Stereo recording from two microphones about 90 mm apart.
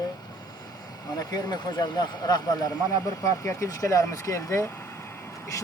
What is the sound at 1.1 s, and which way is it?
Speech, 45° left (ahead or behind).